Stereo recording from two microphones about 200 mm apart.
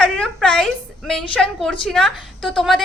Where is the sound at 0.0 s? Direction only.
5° left (ahead or behind).